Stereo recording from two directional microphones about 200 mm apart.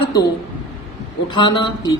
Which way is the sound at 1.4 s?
20° left (ahead or behind).